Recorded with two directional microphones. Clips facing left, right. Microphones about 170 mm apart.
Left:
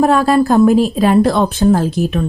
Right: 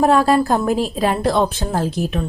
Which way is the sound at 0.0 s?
25° right (ahead or behind).